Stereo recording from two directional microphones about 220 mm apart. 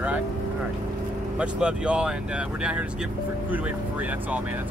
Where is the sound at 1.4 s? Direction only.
5° right (ahead or behind).